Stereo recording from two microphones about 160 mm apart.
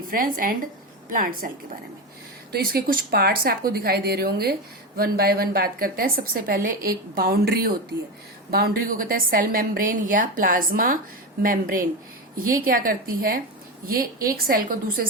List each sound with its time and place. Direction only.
0.1 s a woman's voice: 60° right (ahead or behind)
2.5 s a woman's voice: 70° right (ahead or behind)